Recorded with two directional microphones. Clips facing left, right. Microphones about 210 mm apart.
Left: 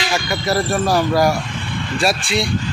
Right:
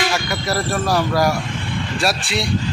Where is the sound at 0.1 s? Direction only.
Centre (ahead or behind).